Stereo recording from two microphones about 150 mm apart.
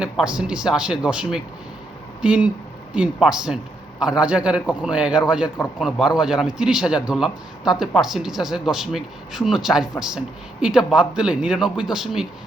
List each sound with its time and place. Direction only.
0.3 s a man's voice: 5° right (ahead or behind)